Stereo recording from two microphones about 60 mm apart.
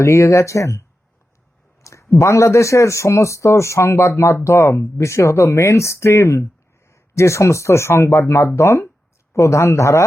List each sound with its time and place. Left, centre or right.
0.0 s speech: left